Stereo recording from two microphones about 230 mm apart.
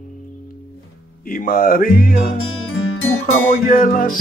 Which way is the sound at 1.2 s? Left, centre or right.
Left.